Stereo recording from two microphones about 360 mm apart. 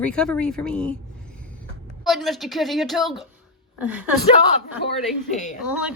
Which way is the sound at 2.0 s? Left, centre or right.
Centre.